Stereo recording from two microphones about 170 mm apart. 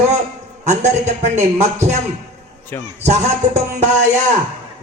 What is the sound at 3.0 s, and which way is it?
Music, 40° right (ahead or behind).